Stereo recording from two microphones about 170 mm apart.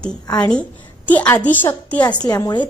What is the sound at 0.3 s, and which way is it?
A woman's voice, 5° left (ahead or behind).